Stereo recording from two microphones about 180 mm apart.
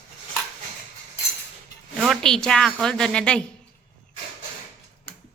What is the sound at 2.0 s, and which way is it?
A woman's voice, centre (ahead or behind).